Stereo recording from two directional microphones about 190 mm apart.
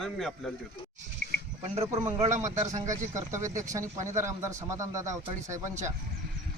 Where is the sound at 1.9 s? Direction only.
15° right (ahead or behind).